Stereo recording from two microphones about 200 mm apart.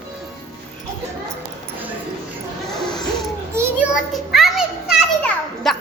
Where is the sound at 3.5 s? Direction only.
10° right (ahead or behind).